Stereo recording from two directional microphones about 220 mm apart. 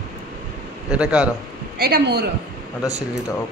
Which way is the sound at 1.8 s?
45° right (ahead or behind).